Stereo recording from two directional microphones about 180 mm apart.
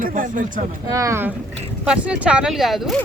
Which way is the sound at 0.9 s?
15° right (ahead or behind).